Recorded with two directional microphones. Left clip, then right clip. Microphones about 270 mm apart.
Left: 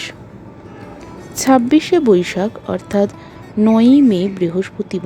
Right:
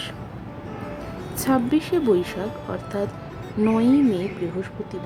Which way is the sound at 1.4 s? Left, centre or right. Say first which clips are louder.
Left 9 dB; left.